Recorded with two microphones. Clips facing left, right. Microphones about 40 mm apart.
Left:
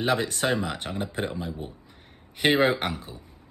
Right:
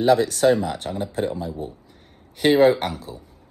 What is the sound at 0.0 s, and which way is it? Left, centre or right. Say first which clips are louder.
Speech: right 8 dB; left.